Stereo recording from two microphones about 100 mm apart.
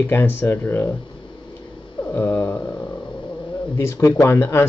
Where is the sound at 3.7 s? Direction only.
30° left (ahead or behind).